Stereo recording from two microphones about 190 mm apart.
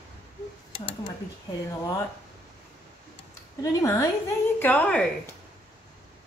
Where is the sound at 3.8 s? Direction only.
15° left (ahead or behind).